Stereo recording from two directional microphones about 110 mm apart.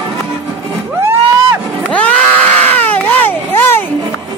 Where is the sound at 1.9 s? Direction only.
10° left (ahead or behind).